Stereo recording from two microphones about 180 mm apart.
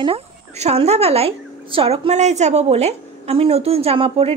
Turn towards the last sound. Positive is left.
turn(degrees=-30)  # may be behind; listen again after turning